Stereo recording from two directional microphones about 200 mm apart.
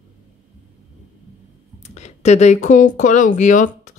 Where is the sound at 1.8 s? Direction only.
35° left (ahead or behind).